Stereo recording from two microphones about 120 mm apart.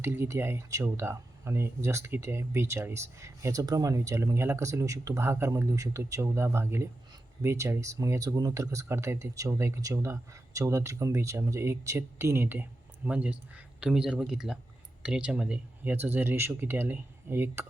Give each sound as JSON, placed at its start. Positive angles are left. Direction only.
{"t": 0.0, "sound": "speech", "side_deg": -20}